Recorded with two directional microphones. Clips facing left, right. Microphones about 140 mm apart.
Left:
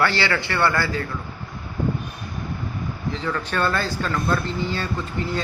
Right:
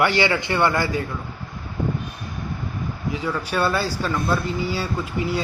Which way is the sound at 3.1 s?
10° right (ahead or behind).